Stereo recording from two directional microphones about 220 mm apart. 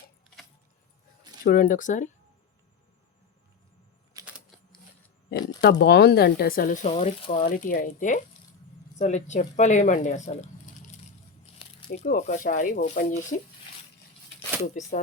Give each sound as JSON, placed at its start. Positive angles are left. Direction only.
{"t": 1.5, "sound": "speech", "side_deg": 40}
{"t": 4.1, "sound": "typewriter", "side_deg": -15}
{"t": 5.8, "sound": "speech", "side_deg": 45}
{"t": 11.5, "sound": "crumpling", "side_deg": 25}
{"t": 11.9, "sound": "speech", "side_deg": 30}
{"t": 14.6, "sound": "speech", "side_deg": 30}